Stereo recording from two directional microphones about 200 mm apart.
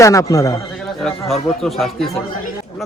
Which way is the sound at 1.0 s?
Centre (ahead or behind).